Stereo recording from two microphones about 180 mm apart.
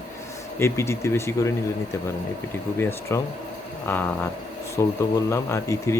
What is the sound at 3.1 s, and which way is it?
Speech, 15° left (ahead or behind).